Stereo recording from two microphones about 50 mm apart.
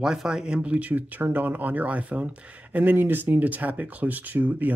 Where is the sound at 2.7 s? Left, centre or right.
Right.